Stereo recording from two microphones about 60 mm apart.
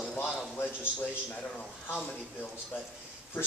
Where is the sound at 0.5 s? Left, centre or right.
Left.